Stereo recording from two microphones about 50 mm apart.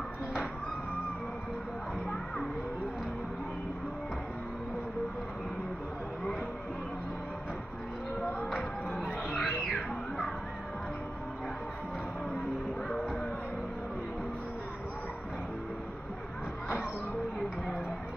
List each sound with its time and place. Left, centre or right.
8.9 s a sound: centre
9.4 s music: centre
12.9 s music: centre